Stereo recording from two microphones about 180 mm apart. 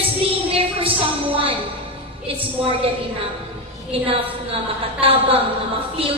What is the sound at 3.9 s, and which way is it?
A woman's voice, 30° right (ahead or behind).